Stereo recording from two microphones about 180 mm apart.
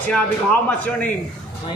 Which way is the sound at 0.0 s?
10° left (ahead or behind).